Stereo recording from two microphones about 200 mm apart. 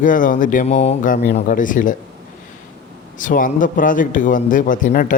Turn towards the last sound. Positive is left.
turn(degrees=45)  # may be behind; listen again after turning